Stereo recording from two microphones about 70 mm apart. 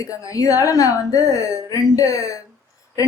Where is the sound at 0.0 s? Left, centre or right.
Left.